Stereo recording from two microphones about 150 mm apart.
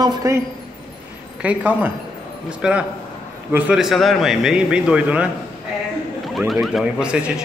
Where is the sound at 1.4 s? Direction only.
10° right (ahead or behind).